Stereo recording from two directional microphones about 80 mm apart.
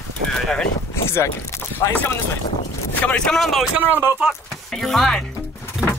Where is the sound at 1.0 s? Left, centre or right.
Left.